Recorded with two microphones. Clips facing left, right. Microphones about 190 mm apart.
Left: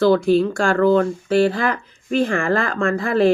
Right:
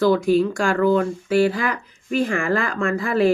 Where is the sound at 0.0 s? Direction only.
30° left (ahead or behind).